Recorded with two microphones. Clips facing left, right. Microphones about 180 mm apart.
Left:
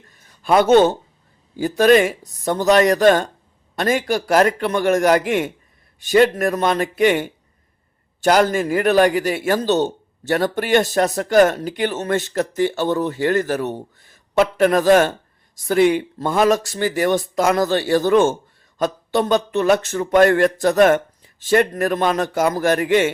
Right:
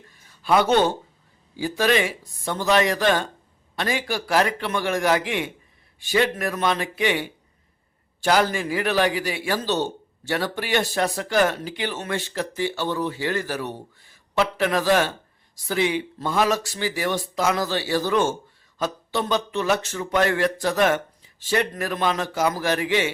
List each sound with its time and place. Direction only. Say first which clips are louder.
0.4 s a man's voice: left 6 dB; 50° left (ahead or behind)